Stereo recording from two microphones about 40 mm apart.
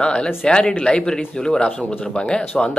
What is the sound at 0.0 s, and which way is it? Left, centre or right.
A man's voice, left.